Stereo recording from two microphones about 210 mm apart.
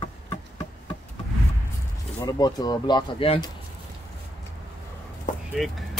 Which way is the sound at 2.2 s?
20° left (ahead or behind).